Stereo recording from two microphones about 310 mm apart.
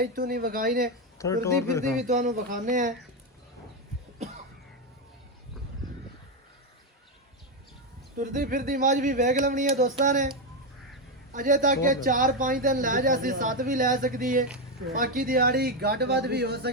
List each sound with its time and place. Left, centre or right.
0.0 s speech: right
1.2 s speech: centre
2.0 s speech: right
8.2 s speech: right
11.3 s speech: right